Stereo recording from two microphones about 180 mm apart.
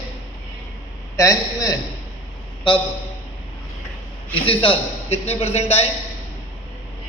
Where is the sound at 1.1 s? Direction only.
20° left (ahead or behind).